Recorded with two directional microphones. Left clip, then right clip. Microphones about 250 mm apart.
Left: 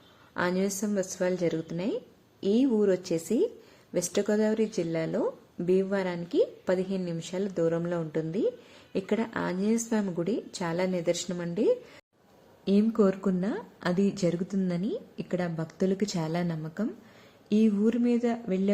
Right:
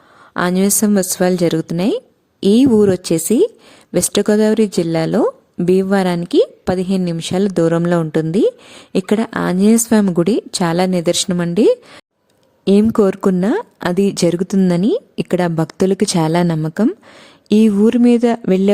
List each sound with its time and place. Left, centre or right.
0.3 s speech: right